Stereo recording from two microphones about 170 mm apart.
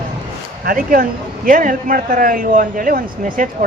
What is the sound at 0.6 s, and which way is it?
A man's voice, 60° right (ahead or behind).